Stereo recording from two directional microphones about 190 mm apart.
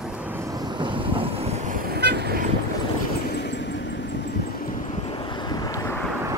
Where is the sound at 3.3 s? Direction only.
65° left (ahead or behind).